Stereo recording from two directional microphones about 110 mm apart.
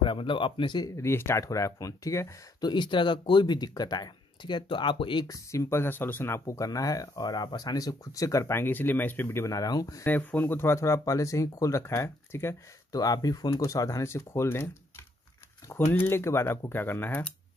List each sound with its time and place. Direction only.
0.0 s speech: 50° left (ahead or behind)
0.9 s speech: 25° left (ahead or behind)
2.6 s speech: 45° left (ahead or behind)
5.2 s speech: 30° left (ahead or behind)
10.0 s speech: 20° left (ahead or behind)
12.9 s speech: 35° left (ahead or behind)
15.9 s speech: 20° left (ahead or behind)